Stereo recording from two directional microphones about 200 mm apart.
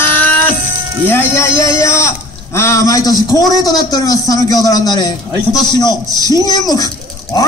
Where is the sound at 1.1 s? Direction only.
15° left (ahead or behind).